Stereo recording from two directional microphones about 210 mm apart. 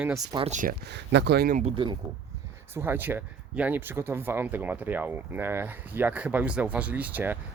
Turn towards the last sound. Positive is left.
turn(degrees=-10)  # may be behind; listen again after turning